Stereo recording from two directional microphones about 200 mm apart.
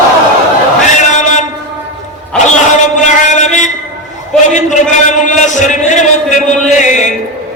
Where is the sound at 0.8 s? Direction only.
35° left (ahead or behind).